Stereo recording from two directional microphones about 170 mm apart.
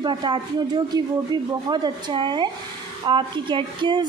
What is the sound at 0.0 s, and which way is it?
A woman's voice, 25° right (ahead or behind).